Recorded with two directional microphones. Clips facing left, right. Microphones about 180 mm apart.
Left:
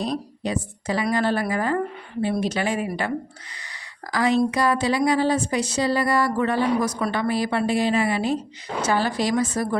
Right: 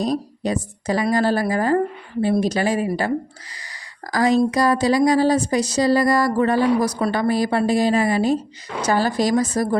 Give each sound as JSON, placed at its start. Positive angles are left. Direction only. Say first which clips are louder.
{"t": 0.0, "sound": "a woman's voice", "louder": "right 4 dB", "side_deg": -40}
{"t": 4.1, "sound": "a woman's voice", "louder": "right 3 dB", "side_deg": -40}